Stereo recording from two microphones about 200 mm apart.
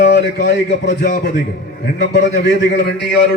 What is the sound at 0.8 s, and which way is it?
Speech, 40° left (ahead or behind).